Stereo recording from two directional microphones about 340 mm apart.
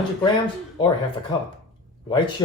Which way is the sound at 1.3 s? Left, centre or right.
Centre.